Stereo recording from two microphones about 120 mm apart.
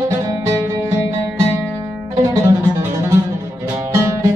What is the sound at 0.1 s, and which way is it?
Music, 25° right (ahead or behind).